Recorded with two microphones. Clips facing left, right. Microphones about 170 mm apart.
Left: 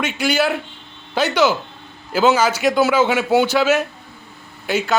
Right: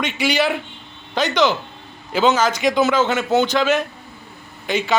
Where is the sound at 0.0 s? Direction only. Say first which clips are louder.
Left 1 dB; centre (ahead or behind).